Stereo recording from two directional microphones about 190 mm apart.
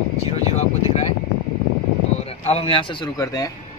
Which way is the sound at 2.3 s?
30° left (ahead or behind).